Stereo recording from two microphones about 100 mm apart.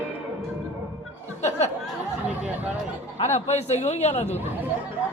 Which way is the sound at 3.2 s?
90° left.